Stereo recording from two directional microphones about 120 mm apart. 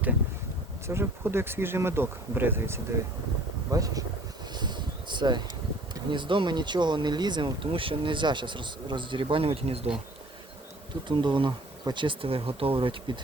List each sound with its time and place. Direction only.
0.9 s speech: 20° right (ahead or behind)
4.5 s a sound: 40° right (ahead or behind)
5.9 s speech: 40° right (ahead or behind)
11.1 s speech: 40° right (ahead or behind)